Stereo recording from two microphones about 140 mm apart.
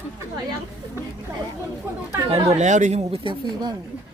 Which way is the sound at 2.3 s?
55° right (ahead or behind).